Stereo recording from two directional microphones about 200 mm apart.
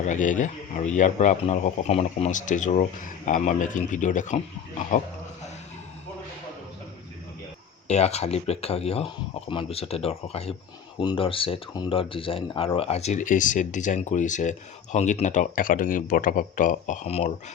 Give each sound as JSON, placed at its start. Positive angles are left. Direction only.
{"t": 0.0, "sound": "speech", "side_deg": 40}
{"t": 7.9, "sound": "speech", "side_deg": 35}